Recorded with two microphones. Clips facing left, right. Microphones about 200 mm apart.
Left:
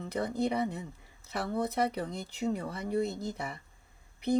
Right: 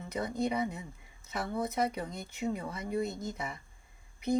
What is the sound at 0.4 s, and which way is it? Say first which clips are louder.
Speech: left 2 dB; 60° left (ahead or behind).